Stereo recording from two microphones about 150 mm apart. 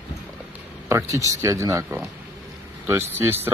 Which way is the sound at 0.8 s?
20° right (ahead or behind).